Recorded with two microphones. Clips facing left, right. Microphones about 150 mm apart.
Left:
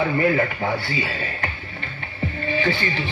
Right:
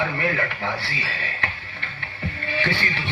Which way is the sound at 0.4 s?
40° left (ahead or behind).